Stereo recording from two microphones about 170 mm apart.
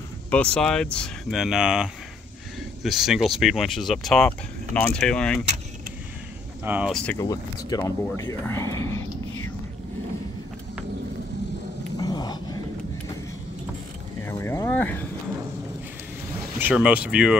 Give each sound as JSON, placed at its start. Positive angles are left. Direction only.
{"t": 0.3, "sound": "speech", "side_deg": 5}
{"t": 6.6, "sound": "speech", "side_deg": -10}
{"t": 6.9, "sound": "speech", "side_deg": 5}
{"t": 7.2, "sound": "speech", "side_deg": 20}
{"t": 12.0, "sound": "dog", "side_deg": 25}
{"t": 14.2, "sound": "vehicle", "side_deg": 15}
{"t": 16.5, "sound": "speech", "side_deg": -10}